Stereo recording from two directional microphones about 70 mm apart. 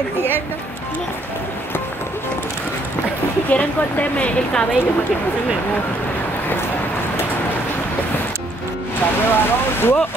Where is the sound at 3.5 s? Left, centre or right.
Left.